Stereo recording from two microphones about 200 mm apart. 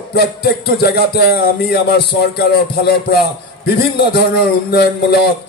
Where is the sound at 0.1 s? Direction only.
55° left (ahead or behind).